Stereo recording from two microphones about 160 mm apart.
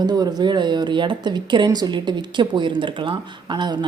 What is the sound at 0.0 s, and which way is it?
Speech, 25° right (ahead or behind).